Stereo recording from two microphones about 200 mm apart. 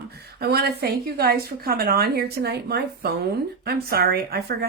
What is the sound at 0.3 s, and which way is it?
A woman's voice, 50° right (ahead or behind).